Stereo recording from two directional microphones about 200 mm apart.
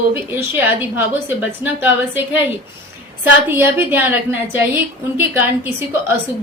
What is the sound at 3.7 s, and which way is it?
A woman's voice, 10° right (ahead or behind).